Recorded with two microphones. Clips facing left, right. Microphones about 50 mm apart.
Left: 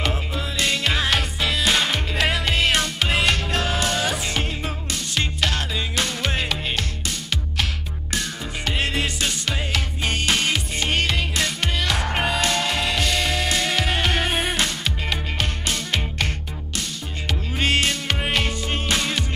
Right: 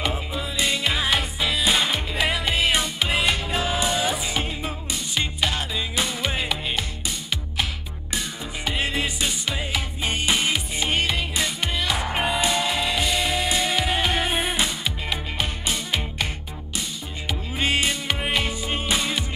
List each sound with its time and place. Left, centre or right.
0.1 s music: centre
17.3 s music: centre